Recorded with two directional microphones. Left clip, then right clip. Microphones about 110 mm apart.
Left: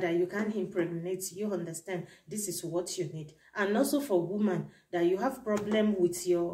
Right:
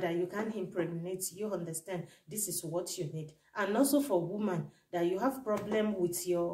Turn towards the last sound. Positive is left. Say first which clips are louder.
# left 4 dB
turn(degrees=-15)  # may be behind; listen again after turning